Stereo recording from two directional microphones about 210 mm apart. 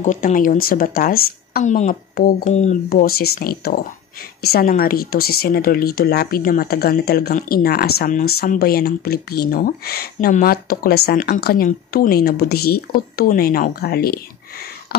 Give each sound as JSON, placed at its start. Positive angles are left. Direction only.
{"t": 0.0, "sound": "a woman's voice", "side_deg": 40}